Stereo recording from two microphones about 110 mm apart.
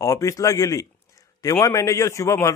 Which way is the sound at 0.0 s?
30° left (ahead or behind).